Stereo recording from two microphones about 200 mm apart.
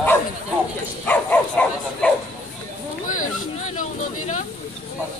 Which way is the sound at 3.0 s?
40° left (ahead or behind).